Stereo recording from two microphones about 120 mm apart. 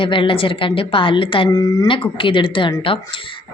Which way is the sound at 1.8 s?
45° left (ahead or behind).